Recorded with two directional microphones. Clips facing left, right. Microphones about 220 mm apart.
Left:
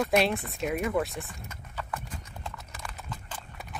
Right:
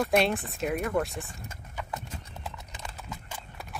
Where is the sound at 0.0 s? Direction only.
Centre (ahead or behind).